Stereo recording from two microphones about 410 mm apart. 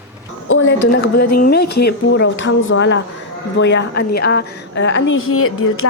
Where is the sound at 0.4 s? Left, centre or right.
Left.